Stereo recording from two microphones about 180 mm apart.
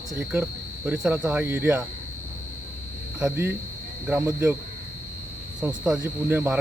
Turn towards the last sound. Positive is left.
turn(degrees=-10)  # may be behind; listen again after turning